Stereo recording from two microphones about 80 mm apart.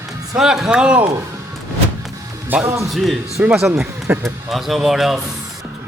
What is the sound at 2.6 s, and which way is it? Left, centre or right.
Speech, right.